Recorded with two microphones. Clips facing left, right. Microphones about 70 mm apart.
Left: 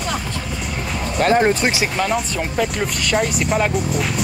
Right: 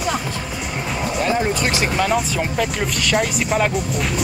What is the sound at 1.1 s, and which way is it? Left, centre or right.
Speech, left.